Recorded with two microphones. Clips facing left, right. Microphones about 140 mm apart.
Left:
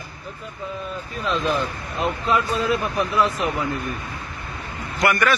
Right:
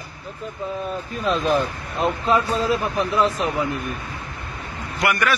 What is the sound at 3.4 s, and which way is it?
Speech, 20° right (ahead or behind).